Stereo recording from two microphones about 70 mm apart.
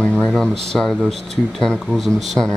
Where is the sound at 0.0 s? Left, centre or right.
Centre.